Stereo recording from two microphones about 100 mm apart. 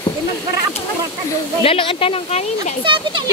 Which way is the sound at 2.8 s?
50° right (ahead or behind).